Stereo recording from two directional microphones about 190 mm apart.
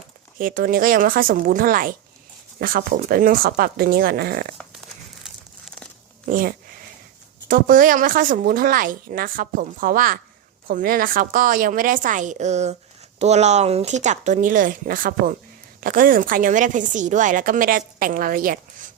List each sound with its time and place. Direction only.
0.3 s a woman's voice: 45° right (ahead or behind)
5.2 s crumpling: centre (ahead or behind)
6.2 s a woman's voice: 50° right (ahead or behind)